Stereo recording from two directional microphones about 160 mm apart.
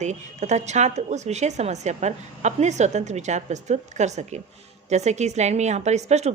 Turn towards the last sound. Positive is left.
turn(degrees=-45)  # may be behind; listen again after turning